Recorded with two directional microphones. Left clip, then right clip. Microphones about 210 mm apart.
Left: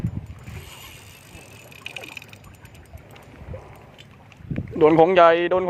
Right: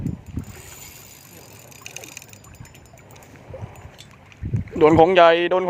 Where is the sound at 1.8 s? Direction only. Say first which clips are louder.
Left 3 dB; centre (ahead or behind).